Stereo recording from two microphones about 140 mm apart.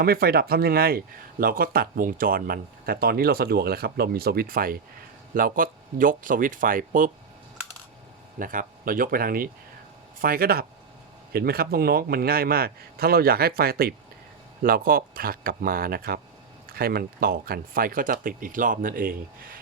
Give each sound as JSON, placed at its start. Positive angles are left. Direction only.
{"t": 0.0, "sound": "speech", "side_deg": -90}
{"t": 8.4, "sound": "speech", "side_deg": -80}